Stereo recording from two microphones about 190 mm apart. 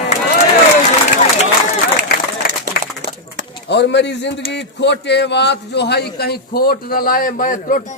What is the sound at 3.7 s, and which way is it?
A man's voice, 65° left (ahead or behind).